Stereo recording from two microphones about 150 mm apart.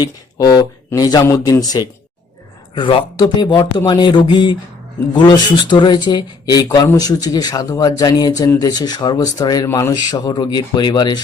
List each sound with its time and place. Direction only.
0.0 s speech: 25° left (ahead or behind)
9.6 s speech: 15° left (ahead or behind)
10.0 s speech: 25° left (ahead or behind)